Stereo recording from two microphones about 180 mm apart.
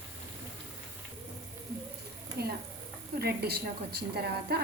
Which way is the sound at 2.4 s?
60° right (ahead or behind).